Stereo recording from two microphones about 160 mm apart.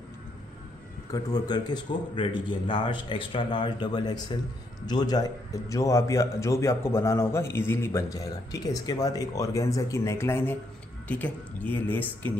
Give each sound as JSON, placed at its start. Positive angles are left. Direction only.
{"t": 1.1, "sound": "a man's voice", "side_deg": 25}